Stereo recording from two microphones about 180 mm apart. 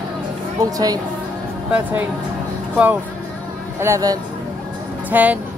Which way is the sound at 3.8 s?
20° right (ahead or behind).